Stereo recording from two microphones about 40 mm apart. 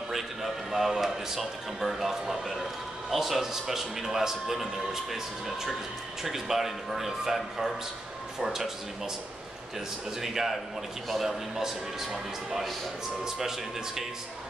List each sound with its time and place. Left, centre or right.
0.1 s a sound: centre
3.1 s a man's voice: centre
10.2 s a man's voice: centre